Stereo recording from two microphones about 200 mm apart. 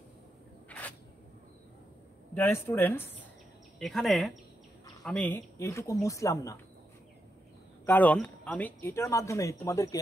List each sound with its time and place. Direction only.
0.7 s a sound: 5° left (ahead or behind)
2.3 s speech: 10° left (ahead or behind)
7.8 s speech: 10° left (ahead or behind)